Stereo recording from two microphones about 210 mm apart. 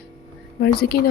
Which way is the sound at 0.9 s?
50° left (ahead or behind).